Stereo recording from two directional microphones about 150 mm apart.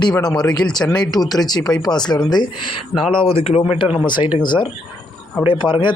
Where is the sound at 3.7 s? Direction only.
35° left (ahead or behind).